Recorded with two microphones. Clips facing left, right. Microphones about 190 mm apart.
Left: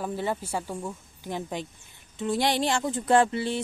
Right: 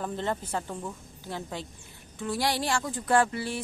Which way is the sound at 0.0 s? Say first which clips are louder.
Left 2 dB; 10° left (ahead or behind).